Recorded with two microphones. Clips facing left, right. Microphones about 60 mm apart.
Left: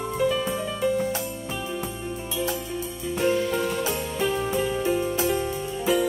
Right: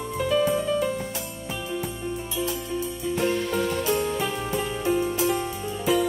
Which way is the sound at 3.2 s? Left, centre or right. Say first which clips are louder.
Left 2 dB; centre.